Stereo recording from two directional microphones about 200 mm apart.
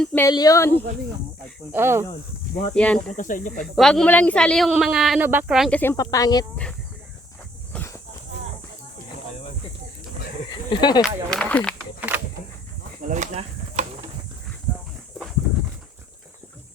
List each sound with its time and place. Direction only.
0.0 s speech: 10° left (ahead or behind)
1.7 s speech: 10° right (ahead or behind)
2.7 s a woman's voice: 5° left (ahead or behind)
3.2 s speech: 40° left (ahead or behind)
3.8 s a woman's voice: 5° left (ahead or behind)
5.8 s speech: 15° left (ahead or behind)
7.7 s a sound: 10° left (ahead or behind)
10.5 s snake: 20° left (ahead or behind)
11.0 s a woman's voice: 5° left (ahead or behind)
11.9 s a sound: 10° right (ahead or behind)
13.1 s a sound: 35° right (ahead or behind)
15.2 s a sound: centre (ahead or behind)